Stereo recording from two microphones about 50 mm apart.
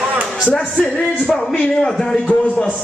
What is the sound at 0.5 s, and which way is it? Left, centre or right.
Speech, left.